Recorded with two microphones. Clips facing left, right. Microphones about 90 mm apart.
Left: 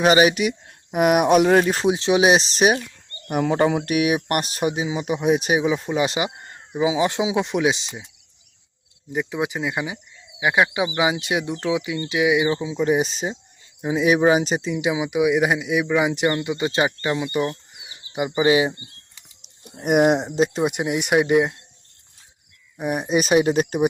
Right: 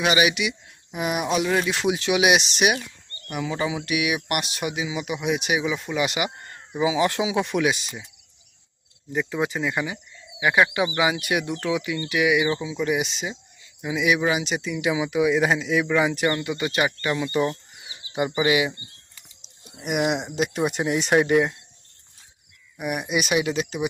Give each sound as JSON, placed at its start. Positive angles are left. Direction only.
{"t": 0.0, "sound": "speech", "side_deg": 40}
{"t": 3.2, "sound": "speech", "side_deg": 50}
{"t": 9.1, "sound": "speech", "side_deg": 15}
{"t": 17.8, "sound": "a sound", "side_deg": 5}
{"t": 18.3, "sound": "speech", "side_deg": 25}
{"t": 19.6, "sound": "speech", "side_deg": 45}
{"t": 20.6, "sound": "speech", "side_deg": 15}
{"t": 22.8, "sound": "speech", "side_deg": 30}